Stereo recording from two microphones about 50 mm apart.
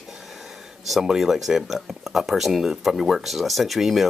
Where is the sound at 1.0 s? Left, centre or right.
Centre.